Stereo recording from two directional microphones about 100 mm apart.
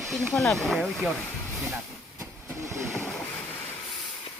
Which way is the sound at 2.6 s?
30° right (ahead or behind).